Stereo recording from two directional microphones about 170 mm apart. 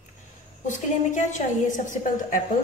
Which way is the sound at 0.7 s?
45° left (ahead or behind).